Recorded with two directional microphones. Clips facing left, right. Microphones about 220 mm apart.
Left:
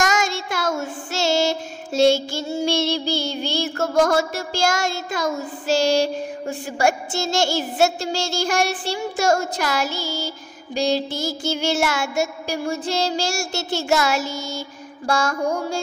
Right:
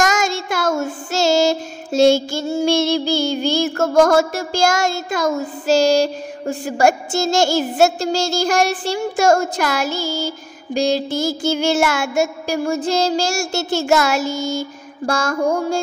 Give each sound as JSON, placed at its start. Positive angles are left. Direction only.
{"t": 0.0, "sound": "child singing", "side_deg": -45}